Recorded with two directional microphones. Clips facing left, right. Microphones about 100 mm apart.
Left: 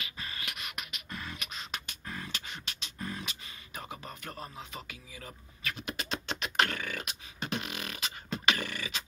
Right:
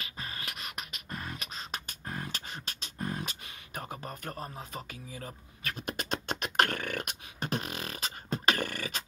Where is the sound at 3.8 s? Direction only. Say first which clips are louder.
Right 3 dB; 45° right (ahead or behind).